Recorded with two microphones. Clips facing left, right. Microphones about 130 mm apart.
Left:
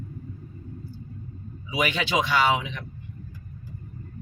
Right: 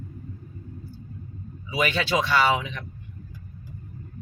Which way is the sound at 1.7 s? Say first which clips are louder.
Right 1 dB; 15° left (ahead or behind).